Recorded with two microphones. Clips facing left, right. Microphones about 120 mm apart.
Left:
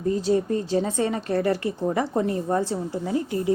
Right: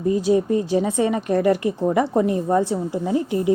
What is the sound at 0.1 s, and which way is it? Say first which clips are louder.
A woman's voice: right 4 dB; 15° right (ahead or behind).